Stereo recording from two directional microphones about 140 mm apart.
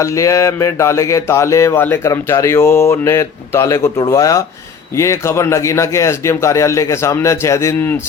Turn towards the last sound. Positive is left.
turn(degrees=20)  # may be behind; listen again after turning